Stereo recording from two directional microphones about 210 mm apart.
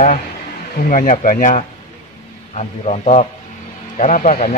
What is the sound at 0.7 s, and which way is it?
A man's voice, 40° left (ahead or behind).